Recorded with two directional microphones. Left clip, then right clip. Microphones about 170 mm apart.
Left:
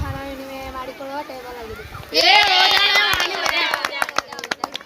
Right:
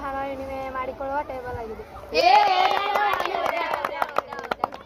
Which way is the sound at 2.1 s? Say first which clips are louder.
Left 3 dB; 35° left (ahead or behind).